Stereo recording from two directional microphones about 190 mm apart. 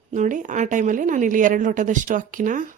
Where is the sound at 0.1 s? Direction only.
40° right (ahead or behind).